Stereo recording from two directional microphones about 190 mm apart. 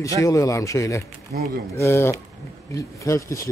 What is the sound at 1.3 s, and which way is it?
Speech, 50° right (ahead or behind).